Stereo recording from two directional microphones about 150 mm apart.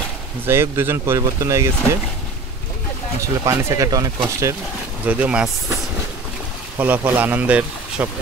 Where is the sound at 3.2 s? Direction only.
20° right (ahead or behind).